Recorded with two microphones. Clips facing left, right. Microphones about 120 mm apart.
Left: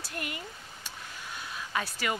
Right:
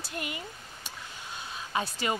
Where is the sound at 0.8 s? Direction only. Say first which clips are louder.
Even; 25° right (ahead or behind).